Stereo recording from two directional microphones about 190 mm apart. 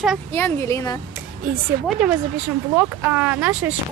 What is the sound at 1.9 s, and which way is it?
Speech, 5° right (ahead or behind).